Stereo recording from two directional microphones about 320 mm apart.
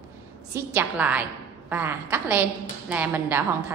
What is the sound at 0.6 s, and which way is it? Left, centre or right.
A woman's voice, centre.